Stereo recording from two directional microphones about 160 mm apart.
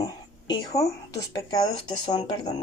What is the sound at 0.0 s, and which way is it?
Speech, 25° left (ahead or behind).